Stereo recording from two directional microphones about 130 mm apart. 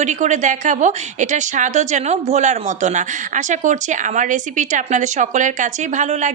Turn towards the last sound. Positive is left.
turn(degrees=-65)  # may be behind; listen again after turning